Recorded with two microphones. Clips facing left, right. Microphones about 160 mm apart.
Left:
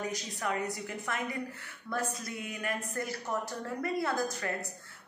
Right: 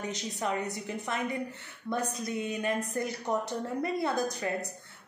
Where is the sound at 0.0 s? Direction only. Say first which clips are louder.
Right 2 dB; 20° right (ahead or behind).